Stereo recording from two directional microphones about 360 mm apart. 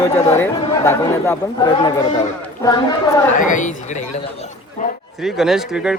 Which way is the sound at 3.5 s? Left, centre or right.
Left.